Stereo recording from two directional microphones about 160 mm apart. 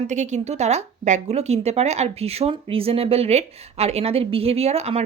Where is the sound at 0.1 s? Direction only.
45° right (ahead or behind).